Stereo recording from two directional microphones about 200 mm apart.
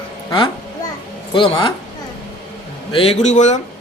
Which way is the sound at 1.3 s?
25° left (ahead or behind).